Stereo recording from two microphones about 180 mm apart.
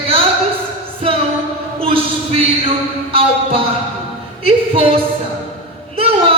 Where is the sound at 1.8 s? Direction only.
30° right (ahead or behind).